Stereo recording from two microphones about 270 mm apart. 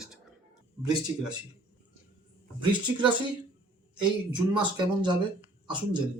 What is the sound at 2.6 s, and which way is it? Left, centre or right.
Speech, centre.